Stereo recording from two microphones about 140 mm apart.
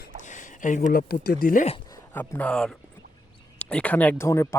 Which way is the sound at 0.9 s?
90° left.